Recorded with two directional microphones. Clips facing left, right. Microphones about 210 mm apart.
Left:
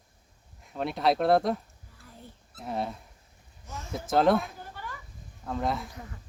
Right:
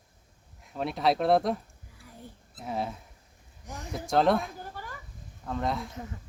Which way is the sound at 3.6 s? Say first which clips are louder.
Right 1 dB; 15° right (ahead or behind).